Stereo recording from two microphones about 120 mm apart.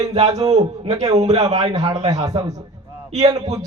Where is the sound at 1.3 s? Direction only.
60° right (ahead or behind).